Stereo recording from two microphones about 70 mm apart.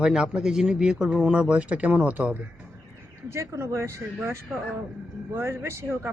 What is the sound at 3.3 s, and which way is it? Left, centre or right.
Speech, right.